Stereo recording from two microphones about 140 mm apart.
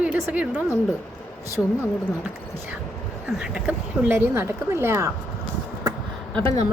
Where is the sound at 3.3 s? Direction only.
5° right (ahead or behind).